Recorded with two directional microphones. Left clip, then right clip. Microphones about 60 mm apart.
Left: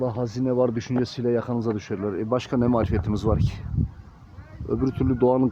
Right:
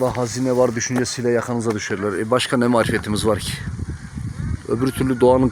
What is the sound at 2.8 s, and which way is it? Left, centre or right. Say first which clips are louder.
Speech: right 6 dB; right.